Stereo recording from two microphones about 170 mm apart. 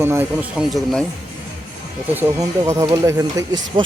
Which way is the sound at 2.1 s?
15° right (ahead or behind).